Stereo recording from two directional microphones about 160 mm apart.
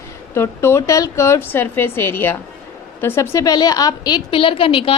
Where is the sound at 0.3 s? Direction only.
15° left (ahead or behind).